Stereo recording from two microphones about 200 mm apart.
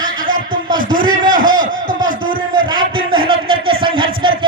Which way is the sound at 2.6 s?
25° right (ahead or behind).